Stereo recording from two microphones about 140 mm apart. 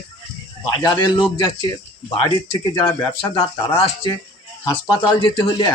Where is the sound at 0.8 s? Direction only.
30° left (ahead or behind).